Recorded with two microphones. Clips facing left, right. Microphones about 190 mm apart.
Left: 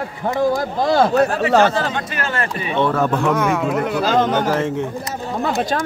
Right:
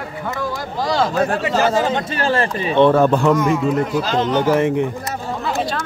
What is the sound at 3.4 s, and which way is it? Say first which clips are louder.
Speech: right 1 dB; 70° left (ahead or behind).